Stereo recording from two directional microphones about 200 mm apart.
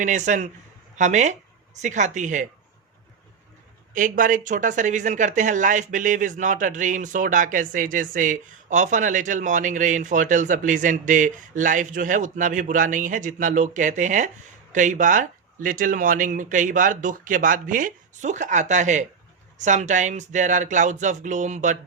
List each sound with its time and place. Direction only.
0.0 s speech: 35° right (ahead or behind)
3.9 s speech: 40° right (ahead or behind)